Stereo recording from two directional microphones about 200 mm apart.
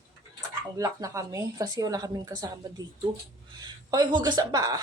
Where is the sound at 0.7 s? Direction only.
15° right (ahead or behind).